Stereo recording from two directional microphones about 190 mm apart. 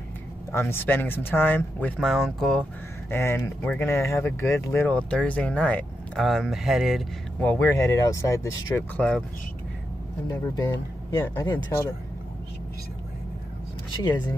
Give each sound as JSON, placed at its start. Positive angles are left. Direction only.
{"t": 0.5, "sound": "speech", "side_deg": 15}
{"t": 3.1, "sound": "speech", "side_deg": 15}
{"t": 7.4, "sound": "speech", "side_deg": 10}
{"t": 10.2, "sound": "speech", "side_deg": 15}